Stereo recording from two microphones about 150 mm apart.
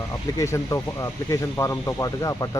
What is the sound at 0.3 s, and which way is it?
Speech, 20° left (ahead or behind).